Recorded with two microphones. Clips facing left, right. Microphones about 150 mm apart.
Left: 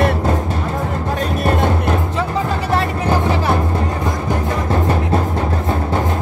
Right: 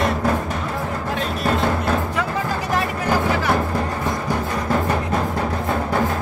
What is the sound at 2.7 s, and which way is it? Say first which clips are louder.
Music: left 3 dB; 30° left (ahead or behind).